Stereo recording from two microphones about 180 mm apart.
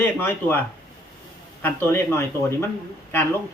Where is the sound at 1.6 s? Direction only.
10° left (ahead or behind).